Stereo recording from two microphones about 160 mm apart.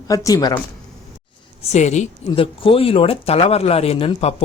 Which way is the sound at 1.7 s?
45° left (ahead or behind).